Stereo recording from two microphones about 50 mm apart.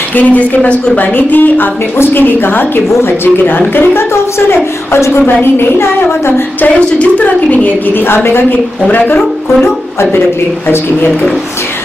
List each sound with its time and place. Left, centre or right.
0.1 s a woman's voice: left
5.2 s a woman's voice: left
7.0 s a woman's voice: left